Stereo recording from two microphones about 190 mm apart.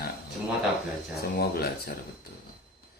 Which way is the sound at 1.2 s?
55° left (ahead or behind).